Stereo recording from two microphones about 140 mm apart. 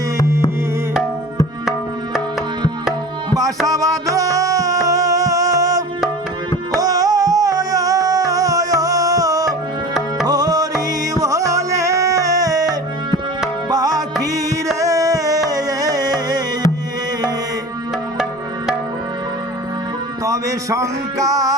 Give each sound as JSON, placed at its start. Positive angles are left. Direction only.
{"t": 3.2, "sound": "tabla", "side_deg": -25}
{"t": 3.7, "sound": "music", "side_deg": -25}
{"t": 13.7, "sound": "music", "side_deg": -30}
{"t": 20.2, "sound": "music", "side_deg": -25}